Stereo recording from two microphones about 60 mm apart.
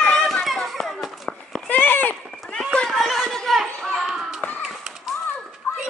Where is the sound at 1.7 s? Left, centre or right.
Left.